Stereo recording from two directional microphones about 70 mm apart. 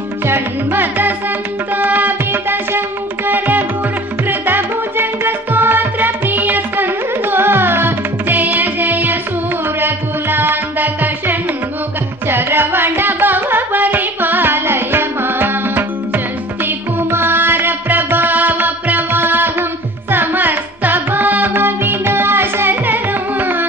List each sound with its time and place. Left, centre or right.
0.3 s music: right